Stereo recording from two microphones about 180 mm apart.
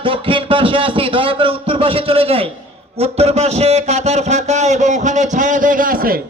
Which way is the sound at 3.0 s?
35° right (ahead or behind).